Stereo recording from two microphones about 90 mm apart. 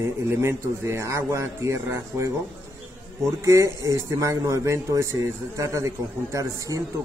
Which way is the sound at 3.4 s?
35° right (ahead or behind).